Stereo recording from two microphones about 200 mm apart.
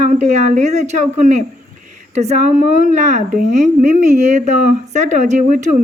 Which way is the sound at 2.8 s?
35° right (ahead or behind).